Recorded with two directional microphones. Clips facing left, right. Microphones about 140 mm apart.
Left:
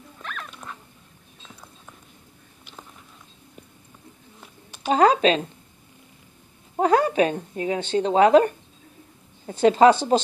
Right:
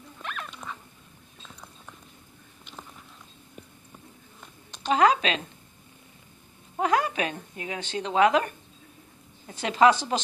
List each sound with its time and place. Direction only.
0.2 s dog: 5° right (ahead or behind)
4.6 s a sound: 5° left (ahead or behind)
4.9 s a woman's voice: 35° left (ahead or behind)
6.8 s a woman's voice: 35° left (ahead or behind)
9.5 s a woman's voice: 30° left (ahead or behind)